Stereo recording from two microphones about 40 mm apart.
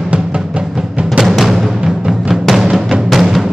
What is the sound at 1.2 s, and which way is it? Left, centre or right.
Music, centre.